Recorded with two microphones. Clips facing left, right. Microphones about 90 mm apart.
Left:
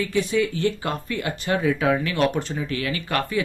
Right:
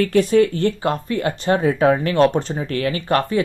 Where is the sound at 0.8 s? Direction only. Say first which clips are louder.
Right 6 dB; 30° right (ahead or behind).